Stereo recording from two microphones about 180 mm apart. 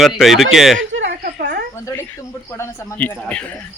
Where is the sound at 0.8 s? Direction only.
90° right.